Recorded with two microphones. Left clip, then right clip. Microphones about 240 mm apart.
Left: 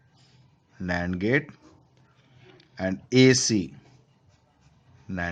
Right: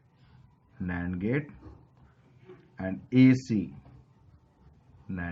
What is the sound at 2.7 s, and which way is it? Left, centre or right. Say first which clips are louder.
Speech: left 4 dB; left.